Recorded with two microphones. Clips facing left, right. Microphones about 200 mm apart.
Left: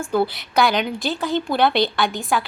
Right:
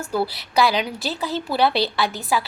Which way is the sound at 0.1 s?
Centre (ahead or behind).